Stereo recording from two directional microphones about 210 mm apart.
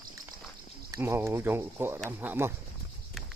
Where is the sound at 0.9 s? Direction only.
10° right (ahead or behind).